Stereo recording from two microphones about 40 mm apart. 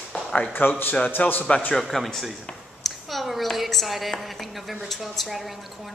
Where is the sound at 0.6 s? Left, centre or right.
Left.